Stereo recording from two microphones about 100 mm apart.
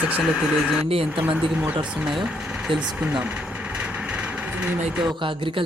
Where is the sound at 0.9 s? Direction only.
70° right (ahead or behind).